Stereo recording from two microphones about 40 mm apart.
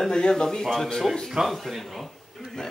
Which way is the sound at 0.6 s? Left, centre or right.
Centre.